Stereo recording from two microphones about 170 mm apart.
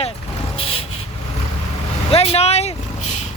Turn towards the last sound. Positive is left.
turn(degrees=40)  # may be behind; listen again after turning